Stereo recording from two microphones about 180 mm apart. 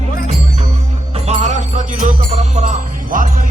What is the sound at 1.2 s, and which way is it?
Music, 40° right (ahead or behind).